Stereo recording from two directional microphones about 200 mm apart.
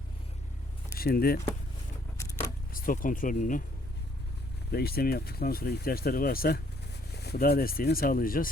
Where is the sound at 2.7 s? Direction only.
45° left (ahead or behind).